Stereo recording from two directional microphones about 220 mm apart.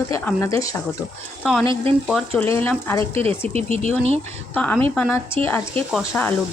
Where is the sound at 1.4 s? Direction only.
Centre (ahead or behind).